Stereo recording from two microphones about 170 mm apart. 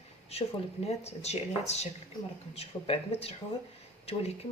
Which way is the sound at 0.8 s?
40° left (ahead or behind).